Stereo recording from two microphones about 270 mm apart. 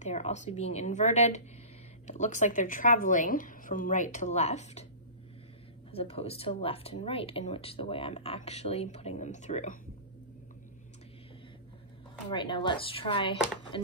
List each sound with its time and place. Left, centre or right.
0.0 s speech: left
5.9 s speech: left
12.3 s speech: centre